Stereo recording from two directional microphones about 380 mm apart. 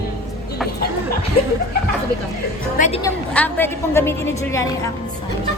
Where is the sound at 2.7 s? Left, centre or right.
Centre.